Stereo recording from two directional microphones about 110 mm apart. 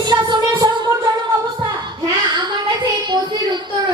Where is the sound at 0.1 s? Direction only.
40° right (ahead or behind).